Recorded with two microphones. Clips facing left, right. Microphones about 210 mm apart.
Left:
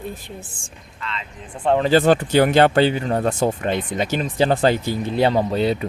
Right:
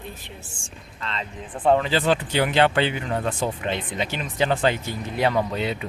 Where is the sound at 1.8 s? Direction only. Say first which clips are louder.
Left 7 dB; 45° left (ahead or behind).